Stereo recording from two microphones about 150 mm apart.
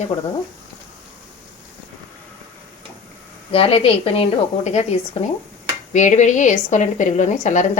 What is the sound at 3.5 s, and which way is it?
A woman's voice, 40° left (ahead or behind).